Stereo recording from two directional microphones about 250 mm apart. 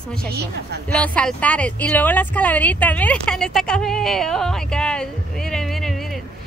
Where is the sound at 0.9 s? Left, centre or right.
Centre.